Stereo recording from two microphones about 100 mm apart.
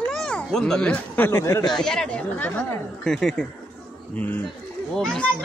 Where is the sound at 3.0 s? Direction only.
5° left (ahead or behind).